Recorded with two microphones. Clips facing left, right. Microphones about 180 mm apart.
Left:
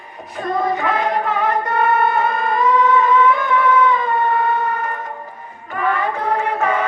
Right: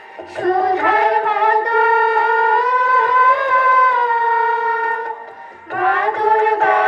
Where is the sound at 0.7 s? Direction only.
70° right (ahead or behind).